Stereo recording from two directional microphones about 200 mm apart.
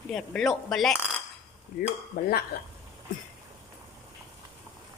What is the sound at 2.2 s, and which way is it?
Speech, 50° left (ahead or behind).